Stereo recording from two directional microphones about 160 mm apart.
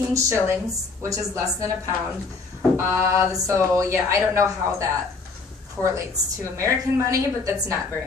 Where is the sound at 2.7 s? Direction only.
15° right (ahead or behind).